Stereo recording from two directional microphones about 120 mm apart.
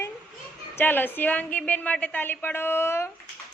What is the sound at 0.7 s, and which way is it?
A woman's voice, 15° left (ahead or behind).